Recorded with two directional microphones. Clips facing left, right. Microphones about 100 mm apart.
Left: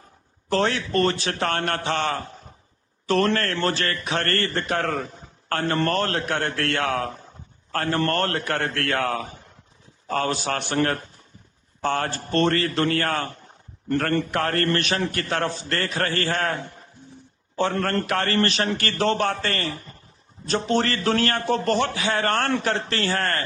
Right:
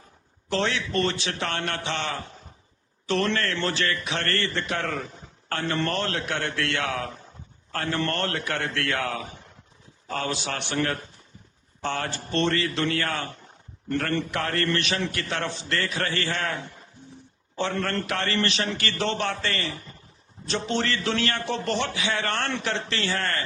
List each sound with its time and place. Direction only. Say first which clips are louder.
0.5 s a man's voice: left 4 dB; 45° left (ahead or behind)
17.6 s a man's voice: left 4 dB; 45° left (ahead or behind)